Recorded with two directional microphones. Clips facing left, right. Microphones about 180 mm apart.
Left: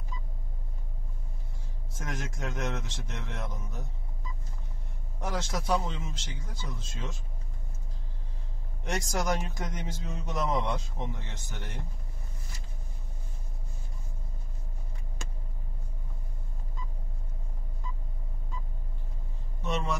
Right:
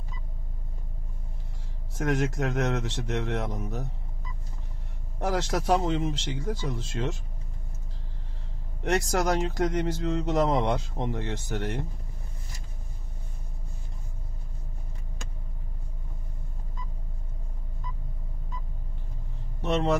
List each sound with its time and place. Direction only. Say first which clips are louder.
2.0 s speech: right 11 dB; 70° right (ahead or behind)
5.2 s speech: right 6 dB; 70° right (ahead or behind)
8.8 s speech: right 6 dB; 65° right (ahead or behind)
19.6 s vehicle: right 7 dB; 65° right (ahead or behind)